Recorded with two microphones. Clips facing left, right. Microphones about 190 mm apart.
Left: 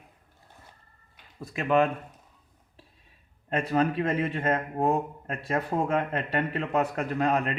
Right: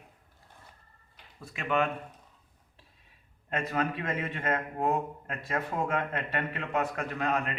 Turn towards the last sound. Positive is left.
turn(degrees=35)  # may be behind; listen again after turning